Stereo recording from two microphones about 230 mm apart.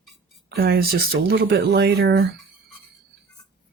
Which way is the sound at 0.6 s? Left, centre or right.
Right.